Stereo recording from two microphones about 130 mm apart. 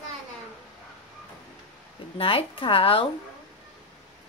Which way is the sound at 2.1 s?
45° left (ahead or behind).